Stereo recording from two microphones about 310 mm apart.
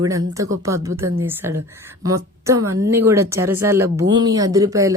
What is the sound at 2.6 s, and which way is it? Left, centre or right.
Speech, right.